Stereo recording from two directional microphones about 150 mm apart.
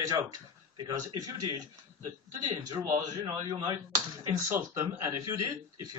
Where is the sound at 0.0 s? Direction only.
25° right (ahead or behind).